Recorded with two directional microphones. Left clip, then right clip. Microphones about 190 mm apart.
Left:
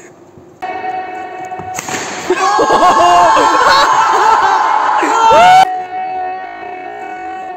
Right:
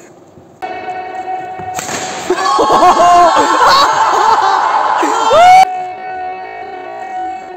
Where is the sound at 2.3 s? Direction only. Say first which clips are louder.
Even; 10° right (ahead or behind).